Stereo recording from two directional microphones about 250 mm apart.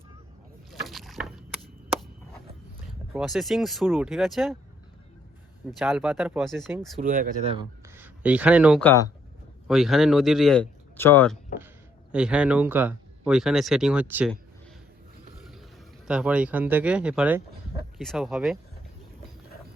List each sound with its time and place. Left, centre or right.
0.7 s rowboat: centre
3.1 s speech: centre
5.8 s speech: centre
7.0 s speech: right
7.9 s speech: centre
8.8 s speech: centre
12.1 s speech: centre
16.0 s speech: centre